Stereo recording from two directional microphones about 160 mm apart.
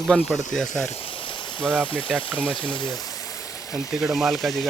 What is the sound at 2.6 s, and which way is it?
Speech, 30° left (ahead or behind).